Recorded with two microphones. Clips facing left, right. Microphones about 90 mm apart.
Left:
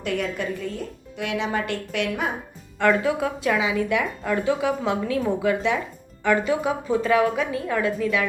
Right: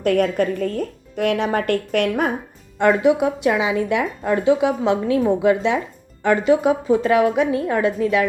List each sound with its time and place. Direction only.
0.0 s speech: 50° right (ahead or behind)
2.7 s a woman's voice: 25° right (ahead or behind)